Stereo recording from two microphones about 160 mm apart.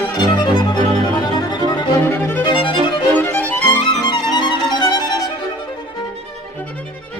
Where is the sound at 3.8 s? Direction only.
30° left (ahead or behind).